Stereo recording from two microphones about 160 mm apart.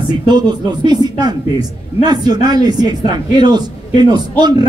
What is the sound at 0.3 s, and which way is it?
A man's voice, 25° right (ahead or behind).